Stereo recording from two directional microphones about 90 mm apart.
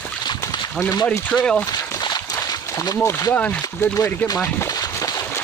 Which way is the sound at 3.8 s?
30° left (ahead or behind).